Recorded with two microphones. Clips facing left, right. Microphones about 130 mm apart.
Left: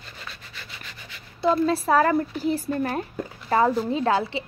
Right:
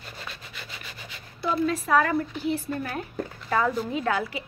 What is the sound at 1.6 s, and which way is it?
Speech, 35° left (ahead or behind).